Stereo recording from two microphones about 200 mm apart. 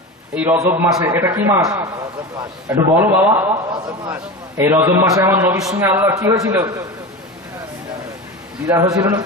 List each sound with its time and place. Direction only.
0.3 s a man's voice: 10° right (ahead or behind)
8.6 s a man's voice: 15° right (ahead or behind)